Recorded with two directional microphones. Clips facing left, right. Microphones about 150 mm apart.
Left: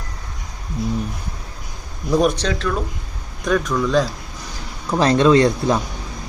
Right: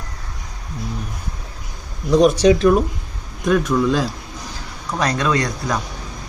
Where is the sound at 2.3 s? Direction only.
10° right (ahead or behind).